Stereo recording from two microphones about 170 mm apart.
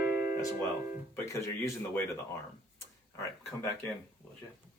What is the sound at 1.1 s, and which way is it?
Speech, 15° left (ahead or behind).